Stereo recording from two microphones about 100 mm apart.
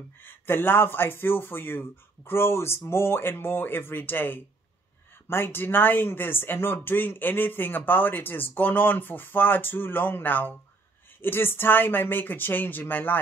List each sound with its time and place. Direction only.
0.2 s speech: 20° left (ahead or behind)